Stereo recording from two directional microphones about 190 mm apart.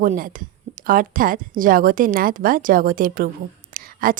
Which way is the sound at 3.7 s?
50° right (ahead or behind).